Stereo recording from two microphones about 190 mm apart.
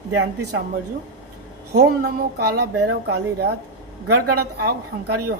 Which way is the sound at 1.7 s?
55° right (ahead or behind).